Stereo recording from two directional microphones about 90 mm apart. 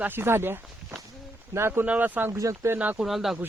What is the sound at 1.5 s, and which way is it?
Speech, 25° right (ahead or behind).